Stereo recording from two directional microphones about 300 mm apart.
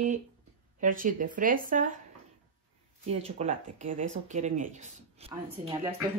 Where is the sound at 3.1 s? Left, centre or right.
Right.